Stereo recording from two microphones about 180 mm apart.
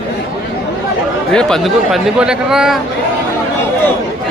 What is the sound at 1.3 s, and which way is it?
Speech, 5° left (ahead or behind).